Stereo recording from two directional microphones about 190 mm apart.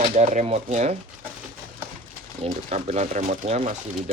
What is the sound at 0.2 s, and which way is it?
Speech, 40° right (ahead or behind).